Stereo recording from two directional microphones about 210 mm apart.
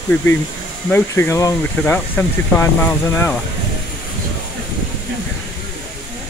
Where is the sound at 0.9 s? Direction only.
10° left (ahead or behind).